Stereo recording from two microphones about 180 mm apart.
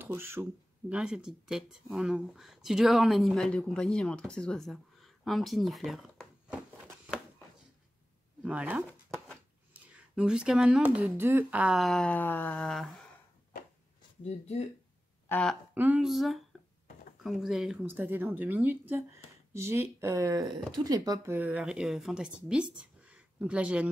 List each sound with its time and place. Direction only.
0.0 s speech: 15° right (ahead or behind)
8.4 s a sound: 5° right (ahead or behind)
9.8 s speech: 5° right (ahead or behind)
14.2 s speech: 40° left (ahead or behind)
15.2 s speech: 10° left (ahead or behind)
15.7 s speech: 10° right (ahead or behind)